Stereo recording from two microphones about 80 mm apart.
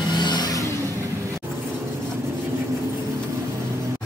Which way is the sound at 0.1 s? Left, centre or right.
Left.